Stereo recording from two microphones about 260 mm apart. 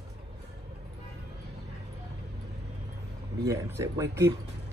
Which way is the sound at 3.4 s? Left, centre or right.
Centre.